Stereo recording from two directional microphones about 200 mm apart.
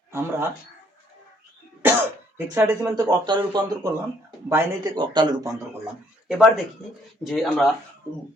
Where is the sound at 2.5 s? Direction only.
10° right (ahead or behind).